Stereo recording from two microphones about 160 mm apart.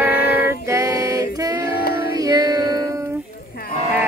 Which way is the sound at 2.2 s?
20° right (ahead or behind).